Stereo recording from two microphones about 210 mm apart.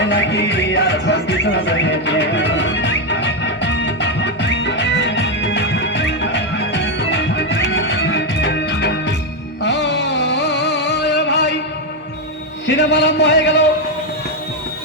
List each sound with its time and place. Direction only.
0.0 s music: 55° left (ahead or behind)
12.6 s a man's voice: 55° left (ahead or behind)